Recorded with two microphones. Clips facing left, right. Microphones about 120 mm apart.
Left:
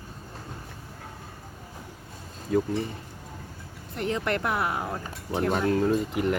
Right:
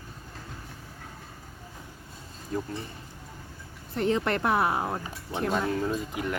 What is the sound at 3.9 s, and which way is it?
Speech, 30° right (ahead or behind).